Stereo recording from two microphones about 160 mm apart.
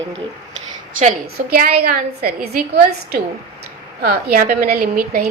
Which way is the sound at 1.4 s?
70° right (ahead or behind).